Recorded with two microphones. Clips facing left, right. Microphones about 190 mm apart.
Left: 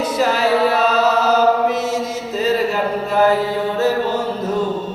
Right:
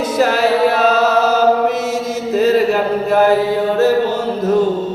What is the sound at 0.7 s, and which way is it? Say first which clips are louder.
Chant: right 2 dB; 45° right (ahead or behind).